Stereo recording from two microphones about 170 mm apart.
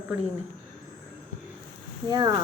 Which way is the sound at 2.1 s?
25° right (ahead or behind).